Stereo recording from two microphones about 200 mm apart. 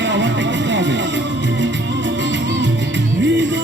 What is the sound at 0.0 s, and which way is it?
Music, 65° right (ahead or behind).